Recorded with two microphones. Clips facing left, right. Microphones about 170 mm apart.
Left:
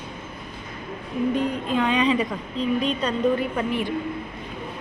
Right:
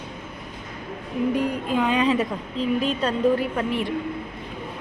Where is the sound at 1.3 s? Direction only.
10° right (ahead or behind).